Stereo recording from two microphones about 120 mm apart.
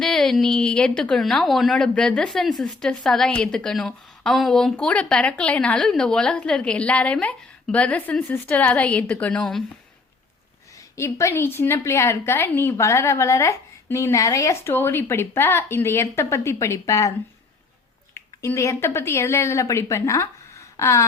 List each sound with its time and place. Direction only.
0.0 s a woman's voice: 5° left (ahead or behind)
10.9 s a woman's voice: 25° left (ahead or behind)
18.1 s a woman's voice: 25° left (ahead or behind)